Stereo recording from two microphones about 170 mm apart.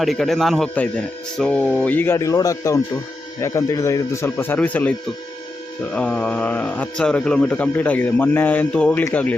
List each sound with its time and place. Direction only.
0.0 s speech: centre (ahead or behind)